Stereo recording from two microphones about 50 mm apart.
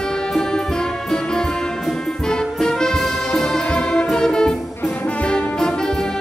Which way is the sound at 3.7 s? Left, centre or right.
Left.